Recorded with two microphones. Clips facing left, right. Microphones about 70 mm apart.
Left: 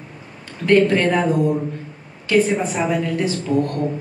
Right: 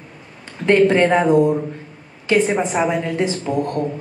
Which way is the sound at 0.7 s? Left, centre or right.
Right.